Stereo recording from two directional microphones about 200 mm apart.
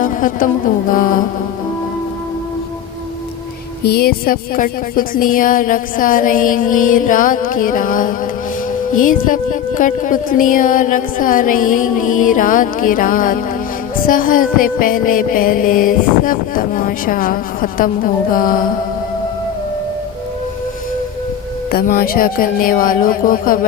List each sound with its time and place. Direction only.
0.0 s music: 40° left (ahead or behind)
3.8 s music: 50° left (ahead or behind)
21.7 s music: 45° left (ahead or behind)